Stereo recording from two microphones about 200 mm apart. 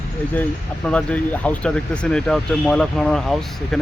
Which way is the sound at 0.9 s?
5° left (ahead or behind).